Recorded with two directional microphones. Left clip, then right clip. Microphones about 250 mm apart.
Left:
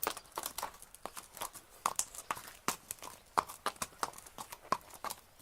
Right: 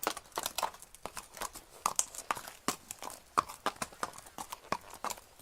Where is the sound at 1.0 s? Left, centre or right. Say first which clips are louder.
Right 2 dB; centre.